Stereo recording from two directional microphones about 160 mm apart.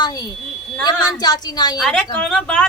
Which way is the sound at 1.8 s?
5° left (ahead or behind).